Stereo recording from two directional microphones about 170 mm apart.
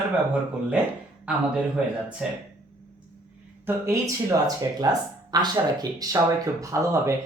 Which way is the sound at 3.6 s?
15° right (ahead or behind).